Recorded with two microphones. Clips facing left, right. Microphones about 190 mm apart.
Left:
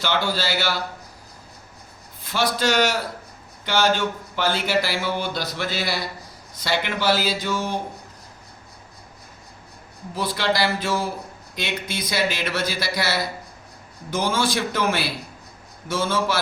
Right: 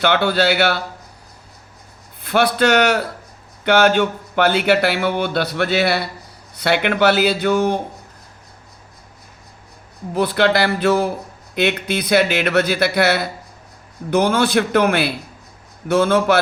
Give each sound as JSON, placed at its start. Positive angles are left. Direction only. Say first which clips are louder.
{"t": 0.0, "sound": "speech", "louder": "right 8 dB", "side_deg": -60}
{"t": 2.2, "sound": "speech", "louder": "right 6 dB", "side_deg": -60}
{"t": 10.2, "sound": "speech", "louder": "right 7 dB", "side_deg": -60}